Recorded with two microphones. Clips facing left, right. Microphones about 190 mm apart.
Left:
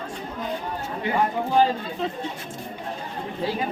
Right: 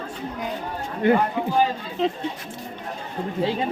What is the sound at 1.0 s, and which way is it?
Speech, 55° right (ahead or behind).